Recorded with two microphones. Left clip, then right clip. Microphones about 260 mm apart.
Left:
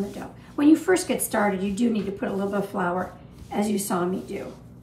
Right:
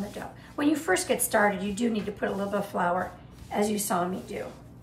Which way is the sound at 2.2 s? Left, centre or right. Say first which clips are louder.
Left 1 dB; centre.